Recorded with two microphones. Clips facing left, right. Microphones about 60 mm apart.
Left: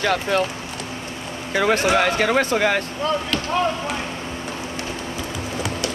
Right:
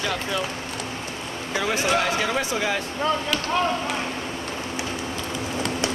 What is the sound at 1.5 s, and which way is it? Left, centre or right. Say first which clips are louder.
Speech: left 5 dB; left.